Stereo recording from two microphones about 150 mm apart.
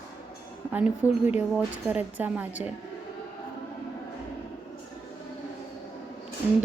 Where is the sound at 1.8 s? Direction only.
10° right (ahead or behind).